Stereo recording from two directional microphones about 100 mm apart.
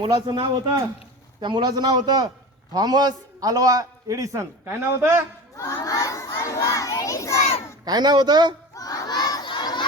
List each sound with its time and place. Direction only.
0.0 s a man's voice: 45° right (ahead or behind); by 5.2 s 25° right (ahead or behind)
5.5 s crowd: 30° left (ahead or behind)
7.9 s a man's voice: 45° right (ahead or behind)
8.7 s crowd: 35° left (ahead or behind)